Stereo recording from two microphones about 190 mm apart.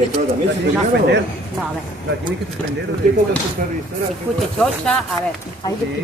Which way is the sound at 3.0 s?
45° right (ahead or behind).